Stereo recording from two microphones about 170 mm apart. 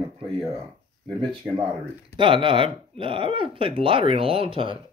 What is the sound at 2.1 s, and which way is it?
Speech, 30° right (ahead or behind).